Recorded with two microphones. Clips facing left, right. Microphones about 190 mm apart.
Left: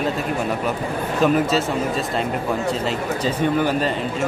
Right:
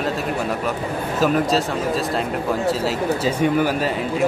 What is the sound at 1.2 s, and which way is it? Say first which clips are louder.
Speech: left 1 dB; centre (ahead or behind).